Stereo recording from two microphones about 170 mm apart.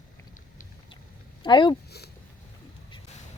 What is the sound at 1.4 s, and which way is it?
Speech, 25° left (ahead or behind).